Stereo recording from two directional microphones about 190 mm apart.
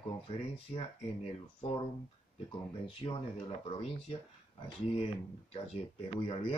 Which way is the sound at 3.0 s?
20° left (ahead or behind).